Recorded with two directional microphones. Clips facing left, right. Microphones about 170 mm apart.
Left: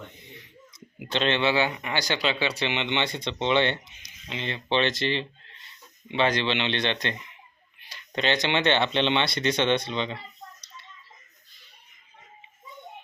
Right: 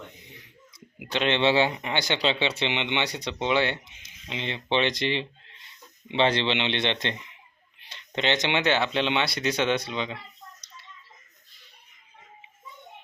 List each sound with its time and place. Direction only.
0.9 s a sound: 10° right (ahead or behind)
1.4 s speech: 30° right (ahead or behind); by 3.9 s 10° right (ahead or behind)
4.0 s speech: 20° right (ahead or behind)